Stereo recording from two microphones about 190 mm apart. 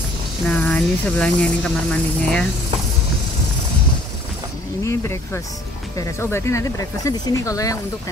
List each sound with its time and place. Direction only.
0.5 s speech: 5° left (ahead or behind)
4.8 s speech: 15° left (ahead or behind)